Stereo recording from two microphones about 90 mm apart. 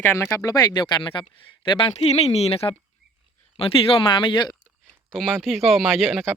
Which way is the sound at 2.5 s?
90° left.